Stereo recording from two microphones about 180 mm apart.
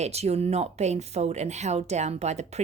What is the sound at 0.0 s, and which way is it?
A woman's voice, 35° right (ahead or behind).